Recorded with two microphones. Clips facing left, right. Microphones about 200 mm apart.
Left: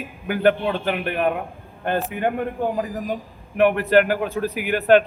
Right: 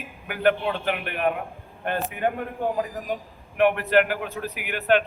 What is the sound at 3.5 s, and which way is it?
A man's voice, 35° left (ahead or behind).